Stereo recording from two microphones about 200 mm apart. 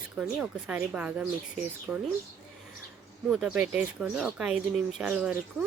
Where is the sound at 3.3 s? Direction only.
5° right (ahead or behind).